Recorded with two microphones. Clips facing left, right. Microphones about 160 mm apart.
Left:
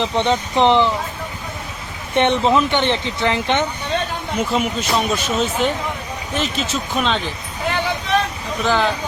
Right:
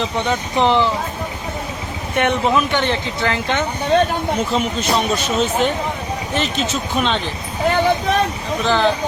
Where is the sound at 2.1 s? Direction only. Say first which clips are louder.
Left 2 dB; 25° left (ahead or behind).